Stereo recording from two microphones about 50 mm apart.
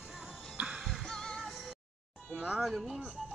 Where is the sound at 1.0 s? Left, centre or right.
Centre.